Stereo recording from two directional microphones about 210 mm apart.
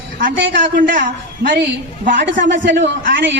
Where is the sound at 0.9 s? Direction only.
40° right (ahead or behind).